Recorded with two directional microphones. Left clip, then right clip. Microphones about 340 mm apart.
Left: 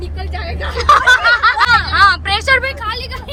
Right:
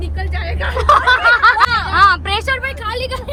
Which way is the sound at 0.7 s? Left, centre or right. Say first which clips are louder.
Left 2 dB; centre.